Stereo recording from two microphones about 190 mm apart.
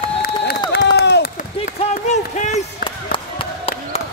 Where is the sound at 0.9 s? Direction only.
65° left (ahead or behind).